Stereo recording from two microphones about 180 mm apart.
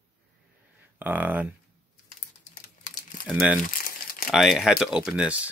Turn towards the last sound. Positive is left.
turn(degrees=-5)  # may be behind; listen again after turning